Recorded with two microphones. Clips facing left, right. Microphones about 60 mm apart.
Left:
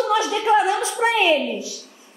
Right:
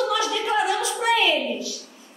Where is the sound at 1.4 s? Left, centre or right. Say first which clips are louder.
Left 2 dB; centre.